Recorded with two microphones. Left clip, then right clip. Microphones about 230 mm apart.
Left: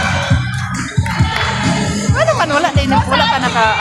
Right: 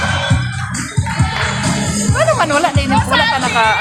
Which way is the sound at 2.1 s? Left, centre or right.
Centre.